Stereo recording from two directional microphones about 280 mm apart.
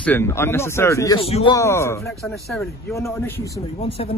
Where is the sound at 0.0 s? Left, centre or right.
Centre.